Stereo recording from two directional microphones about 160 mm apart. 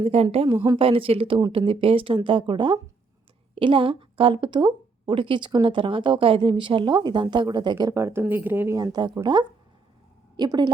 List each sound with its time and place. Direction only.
0.0 s speech: 40° right (ahead or behind)
0.5 s speech: 25° right (ahead or behind)
0.8 s speech: 35° right (ahead or behind)